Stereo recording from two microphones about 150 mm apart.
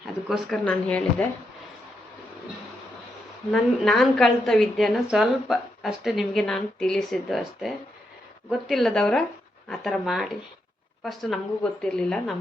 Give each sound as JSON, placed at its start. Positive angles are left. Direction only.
{"t": 0.0, "sound": "speech", "side_deg": 0}
{"t": 3.5, "sound": "a woman's voice", "side_deg": 0}